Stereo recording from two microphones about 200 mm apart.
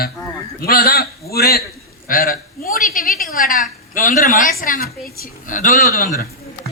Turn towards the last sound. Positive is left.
turn(degrees=45)  # may be behind; listen again after turning